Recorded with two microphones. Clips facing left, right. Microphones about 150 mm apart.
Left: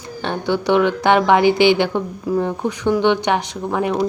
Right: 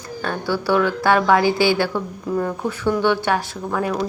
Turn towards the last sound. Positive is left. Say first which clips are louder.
# left 3 dB
turn(degrees=20)  # may be behind; listen again after turning